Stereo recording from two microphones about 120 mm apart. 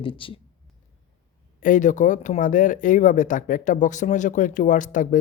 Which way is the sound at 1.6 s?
90° left.